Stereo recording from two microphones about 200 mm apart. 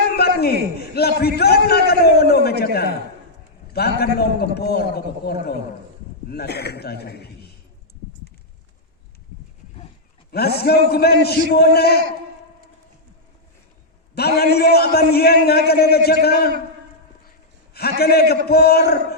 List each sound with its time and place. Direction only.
0.2 s a man's voice: 50° left (ahead or behind)
10.3 s a man's voice: 50° left (ahead or behind)
14.2 s a man's voice: 50° left (ahead or behind)
17.7 s a man's voice: 50° left (ahead or behind)